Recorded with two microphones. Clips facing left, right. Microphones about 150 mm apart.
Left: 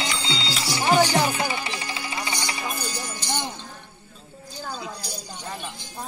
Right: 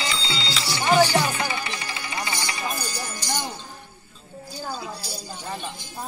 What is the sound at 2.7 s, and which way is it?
Music, 10° left (ahead or behind).